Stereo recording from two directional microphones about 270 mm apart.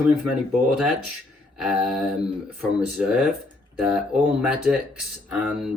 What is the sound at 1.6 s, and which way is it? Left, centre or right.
Speech, centre.